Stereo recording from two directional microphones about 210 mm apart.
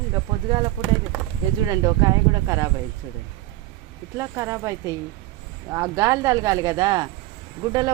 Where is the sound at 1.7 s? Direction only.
15° right (ahead or behind).